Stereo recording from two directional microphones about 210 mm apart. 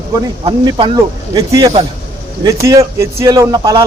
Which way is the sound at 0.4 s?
25° right (ahead or behind).